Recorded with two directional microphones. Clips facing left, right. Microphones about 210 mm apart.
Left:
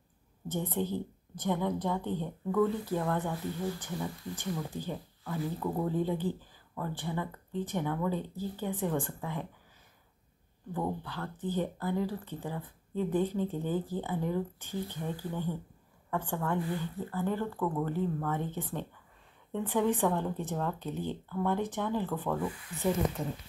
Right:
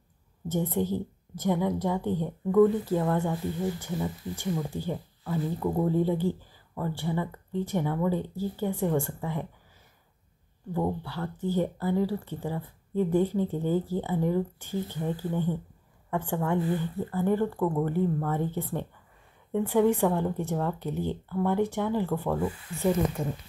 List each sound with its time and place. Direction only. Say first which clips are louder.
0.5 s speech: right 5 dB; 15° right (ahead or behind)
10.7 s speech: right 5 dB; 15° right (ahead or behind)